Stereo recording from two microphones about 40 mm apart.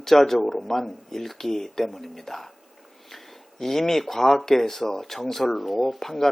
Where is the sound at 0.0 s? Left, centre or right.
Centre.